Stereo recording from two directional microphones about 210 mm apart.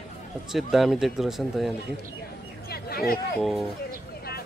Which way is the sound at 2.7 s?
45° left (ahead or behind).